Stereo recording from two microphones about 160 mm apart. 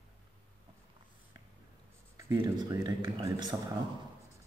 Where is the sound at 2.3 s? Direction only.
25° right (ahead or behind).